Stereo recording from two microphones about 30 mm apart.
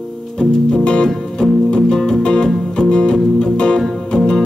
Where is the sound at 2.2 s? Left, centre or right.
Left.